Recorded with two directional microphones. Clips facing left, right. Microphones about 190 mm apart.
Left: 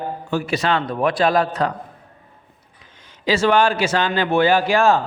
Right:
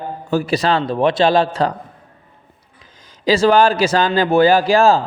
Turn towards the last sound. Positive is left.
turn(degrees=-35)  # may be behind; listen again after turning